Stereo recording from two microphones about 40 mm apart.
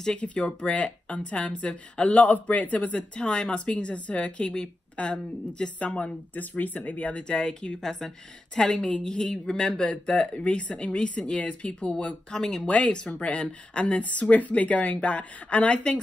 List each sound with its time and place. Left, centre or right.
0.2 s speech: left
3.0 s speech: left
6.3 s speech: left
7.2 s speech: left
7.8 s speech: centre
9.3 s speech: centre
9.8 s speech: left
12.3 s speech: centre
12.6 s speech: left